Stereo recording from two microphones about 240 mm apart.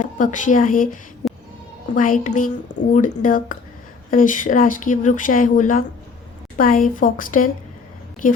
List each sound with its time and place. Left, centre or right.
0.0 s a woman's voice: left
1.2 s music: centre
2.0 s speech: left